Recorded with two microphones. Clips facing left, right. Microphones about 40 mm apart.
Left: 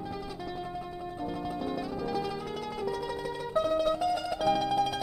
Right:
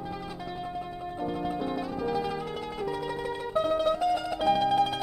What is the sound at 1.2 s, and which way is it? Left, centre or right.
Music, right.